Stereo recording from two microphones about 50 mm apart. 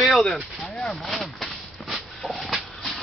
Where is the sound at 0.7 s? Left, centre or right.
Centre.